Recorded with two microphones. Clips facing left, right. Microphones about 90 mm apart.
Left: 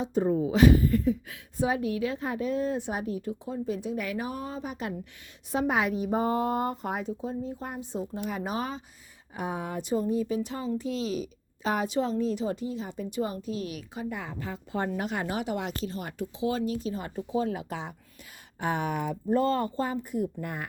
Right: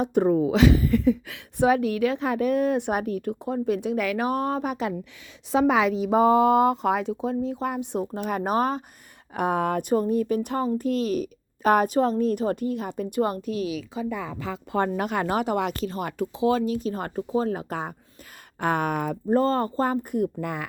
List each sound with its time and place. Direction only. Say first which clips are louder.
0.0 s a woman's voice: right 5 dB; 65° right (ahead or behind)
5.5 s speech: right 6 dB; 90° right
8.0 s speech: right 6 dB; 50° right (ahead or behind)
9.3 s a woman's voice: right 9 dB; 65° right (ahead or behind)
14.3 s speech: right 9 dB; 90° right
14.8 s a woman's voice: right 5 dB; 60° right (ahead or behind); by 20.7 s 90° right